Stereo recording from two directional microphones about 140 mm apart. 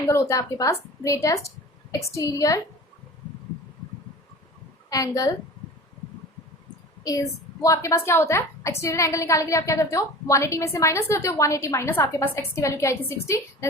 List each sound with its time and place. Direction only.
0.0 s a woman's voice: 20° left (ahead or behind)
4.9 s a woman's voice: 25° left (ahead or behind)
7.0 s a woman's voice: 25° left (ahead or behind)